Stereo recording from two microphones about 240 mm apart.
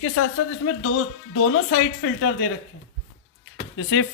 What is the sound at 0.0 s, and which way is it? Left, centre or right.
Speech, left.